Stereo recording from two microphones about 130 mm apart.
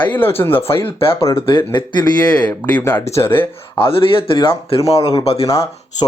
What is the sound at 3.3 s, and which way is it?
Speech, 45° left (ahead or behind).